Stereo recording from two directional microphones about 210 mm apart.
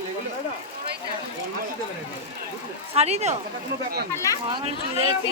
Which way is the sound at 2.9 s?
30° right (ahead or behind).